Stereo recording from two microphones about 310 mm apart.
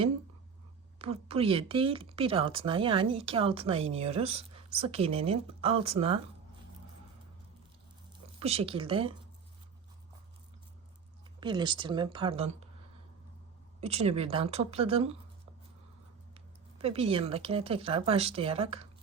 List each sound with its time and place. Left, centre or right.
0.9 s speech: centre
8.4 s speech: centre
11.3 s speech: centre
13.8 s speech: centre
16.3 s speech: centre